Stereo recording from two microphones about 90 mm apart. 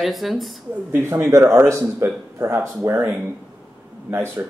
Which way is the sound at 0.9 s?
25° right (ahead or behind).